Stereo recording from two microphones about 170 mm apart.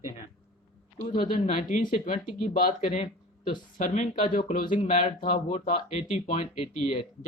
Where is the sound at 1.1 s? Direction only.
55° left (ahead or behind).